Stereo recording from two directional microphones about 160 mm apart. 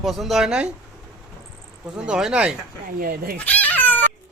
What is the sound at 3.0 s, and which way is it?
Speech, 65° right (ahead or behind).